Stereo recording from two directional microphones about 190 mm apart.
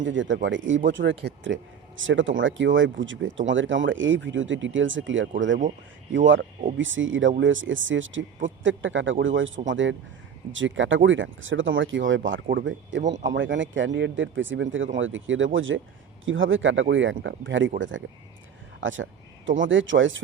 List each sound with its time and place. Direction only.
0.0 s a man's voice: 75° right (ahead or behind)
9.6 s speech: 80° right
12.5 s a man's voice: 70° right (ahead or behind); by 20.2 s 85° right